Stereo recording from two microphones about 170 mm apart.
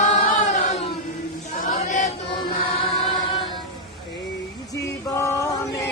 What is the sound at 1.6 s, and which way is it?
Chant, 45° left (ahead or behind).